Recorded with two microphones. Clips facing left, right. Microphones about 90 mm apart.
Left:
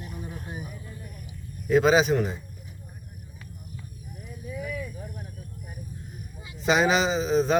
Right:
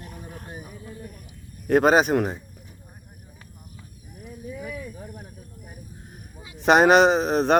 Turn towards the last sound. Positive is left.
turn(degrees=-65)  # may be behind; listen again after turning